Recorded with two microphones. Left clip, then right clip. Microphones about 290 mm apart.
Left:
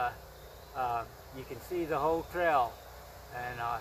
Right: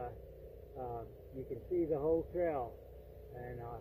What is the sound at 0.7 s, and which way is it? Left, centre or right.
Speech, left.